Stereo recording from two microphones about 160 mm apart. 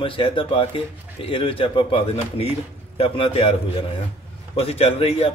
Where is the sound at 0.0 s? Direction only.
35° left (ahead or behind).